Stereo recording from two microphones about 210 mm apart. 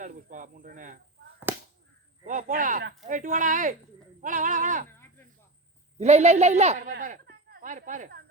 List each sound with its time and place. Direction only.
0.0 s snake: 40° right (ahead or behind)
1.5 s a sound: 10° right (ahead or behind)
2.2 s speech: 40° right (ahead or behind)
6.0 s speech: 30° right (ahead or behind)